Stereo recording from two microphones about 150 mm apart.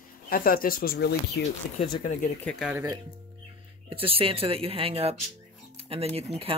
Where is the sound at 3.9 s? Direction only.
40° right (ahead or behind).